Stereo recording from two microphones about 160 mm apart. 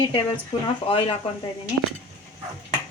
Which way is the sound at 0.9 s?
35° left (ahead or behind).